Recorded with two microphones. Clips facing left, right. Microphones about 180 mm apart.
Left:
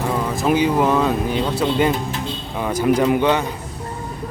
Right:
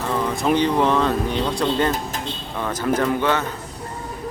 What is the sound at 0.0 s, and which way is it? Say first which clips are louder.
Speech: left 1 dB; 10° left (ahead or behind).